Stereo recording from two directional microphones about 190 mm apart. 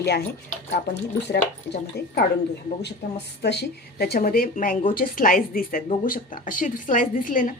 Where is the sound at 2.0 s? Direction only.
60° left (ahead or behind).